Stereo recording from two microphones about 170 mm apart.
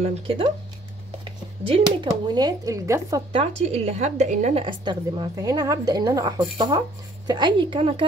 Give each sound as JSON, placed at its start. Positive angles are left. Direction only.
{"t": 0.0, "sound": "speech", "side_deg": -35}
{"t": 1.6, "sound": "a woman's voice", "side_deg": -30}
{"t": 3.3, "sound": "speech", "side_deg": -35}
{"t": 4.6, "sound": "a woman's voice", "side_deg": -30}